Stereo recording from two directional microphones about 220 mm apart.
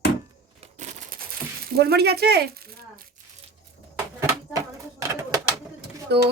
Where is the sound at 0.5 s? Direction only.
35° right (ahead or behind).